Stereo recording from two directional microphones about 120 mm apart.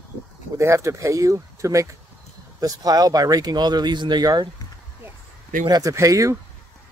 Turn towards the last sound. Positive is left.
turn(degrees=-25)  # may be behind; listen again after turning